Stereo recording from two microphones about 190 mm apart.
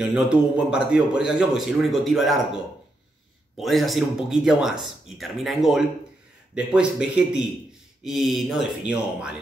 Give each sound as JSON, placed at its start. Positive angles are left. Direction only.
{"t": 0.0, "sound": "a man's voice", "side_deg": -5}
{"t": 3.5, "sound": "a man's voice", "side_deg": 0}